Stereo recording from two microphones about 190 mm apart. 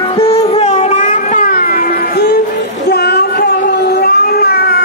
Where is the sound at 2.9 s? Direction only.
60° left (ahead or behind).